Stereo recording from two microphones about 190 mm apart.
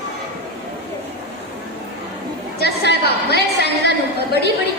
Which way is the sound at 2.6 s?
60° left (ahead or behind).